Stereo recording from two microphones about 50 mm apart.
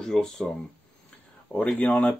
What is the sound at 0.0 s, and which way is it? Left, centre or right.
Speech, centre.